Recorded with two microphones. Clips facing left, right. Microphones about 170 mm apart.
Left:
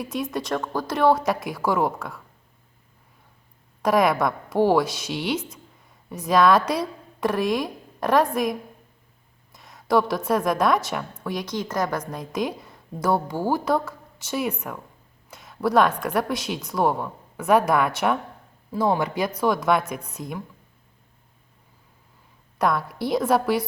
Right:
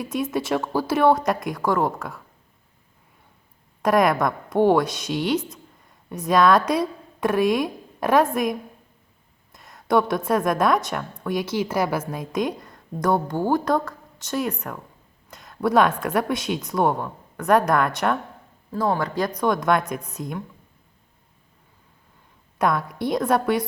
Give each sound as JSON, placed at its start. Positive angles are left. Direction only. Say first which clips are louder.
{"t": 0.0, "sound": "a woman's voice", "louder": "right 3 dB", "side_deg": 0}
{"t": 3.8, "sound": "a woman's voice", "louder": "right 1 dB", "side_deg": 0}
{"t": 22.5, "sound": "a woman's voice", "louder": "right 1 dB", "side_deg": 0}